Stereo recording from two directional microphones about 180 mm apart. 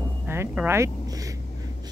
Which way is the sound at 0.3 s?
15° right (ahead or behind).